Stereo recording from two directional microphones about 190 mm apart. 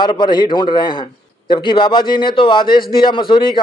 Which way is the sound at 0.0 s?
25° left (ahead or behind).